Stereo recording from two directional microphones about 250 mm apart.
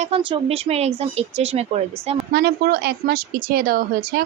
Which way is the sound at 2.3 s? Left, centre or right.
Right.